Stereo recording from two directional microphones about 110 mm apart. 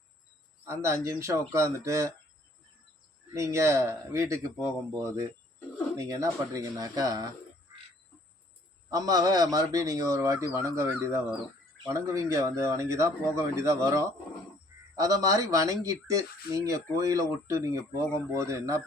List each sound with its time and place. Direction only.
0.6 s speech: 25° right (ahead or behind)
3.3 s speech: 25° right (ahead or behind)
6.0 s speech: 30° right (ahead or behind)
8.9 s speech: 35° right (ahead or behind)